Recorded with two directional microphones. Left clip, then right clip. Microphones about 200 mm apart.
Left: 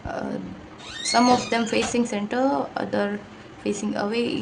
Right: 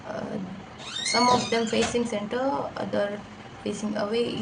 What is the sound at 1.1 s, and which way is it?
A woman's voice, 45° left (ahead or behind).